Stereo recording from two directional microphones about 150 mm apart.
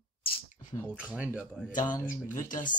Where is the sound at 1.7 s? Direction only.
60° left (ahead or behind).